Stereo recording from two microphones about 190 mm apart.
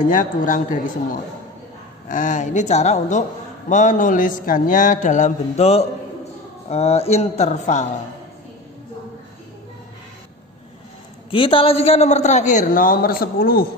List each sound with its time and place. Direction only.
0.0 s a man's voice: 45° left (ahead or behind)
11.2 s a man's voice: 30° left (ahead or behind); by 13.7 s 50° left (ahead or behind)